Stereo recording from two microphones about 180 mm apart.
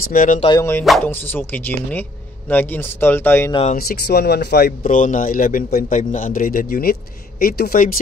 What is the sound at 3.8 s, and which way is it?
Speech, 60° left (ahead or behind).